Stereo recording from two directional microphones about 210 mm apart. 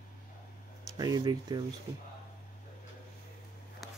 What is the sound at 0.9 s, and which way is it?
Speech, 20° right (ahead or behind).